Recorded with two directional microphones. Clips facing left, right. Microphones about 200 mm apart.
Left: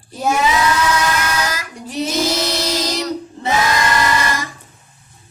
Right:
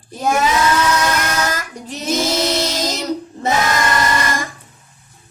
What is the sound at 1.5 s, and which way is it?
Child singing, 45° right (ahead or behind).